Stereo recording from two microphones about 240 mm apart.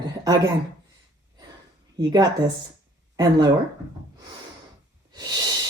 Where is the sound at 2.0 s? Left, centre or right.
Centre.